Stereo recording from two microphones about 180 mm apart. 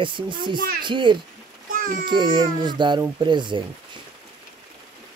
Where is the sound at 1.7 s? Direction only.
50° right (ahead or behind).